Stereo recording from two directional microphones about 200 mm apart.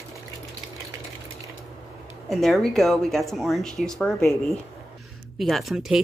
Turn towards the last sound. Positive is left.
turn(degrees=0)  # may be behind; listen again after turning